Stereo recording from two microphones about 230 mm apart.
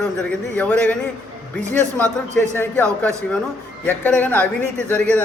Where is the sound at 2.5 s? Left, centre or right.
Centre.